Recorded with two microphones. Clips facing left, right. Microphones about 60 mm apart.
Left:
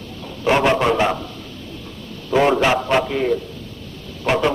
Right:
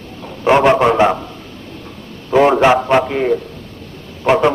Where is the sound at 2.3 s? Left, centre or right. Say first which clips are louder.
Right 5 dB; right.